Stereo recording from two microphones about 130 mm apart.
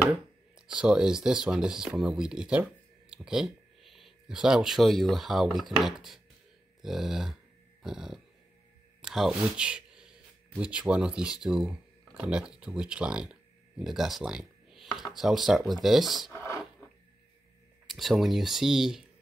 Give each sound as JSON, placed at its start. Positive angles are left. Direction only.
{"t": 0.7, "sound": "speech", "side_deg": -5}
{"t": 16.3, "sound": "a sound", "side_deg": 20}
{"t": 17.8, "sound": "speech", "side_deg": 0}